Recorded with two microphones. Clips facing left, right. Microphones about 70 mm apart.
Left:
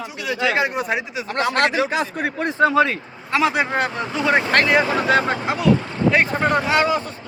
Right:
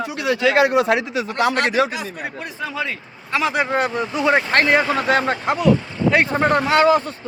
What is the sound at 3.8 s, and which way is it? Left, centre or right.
Speech, centre.